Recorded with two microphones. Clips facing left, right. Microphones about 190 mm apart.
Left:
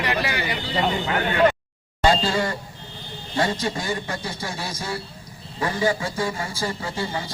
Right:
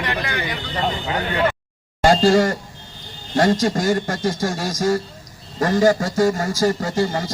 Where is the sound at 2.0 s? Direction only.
45° right (ahead or behind).